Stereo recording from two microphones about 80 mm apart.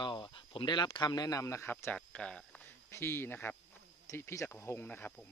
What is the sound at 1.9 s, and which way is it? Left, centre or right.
Speech, centre.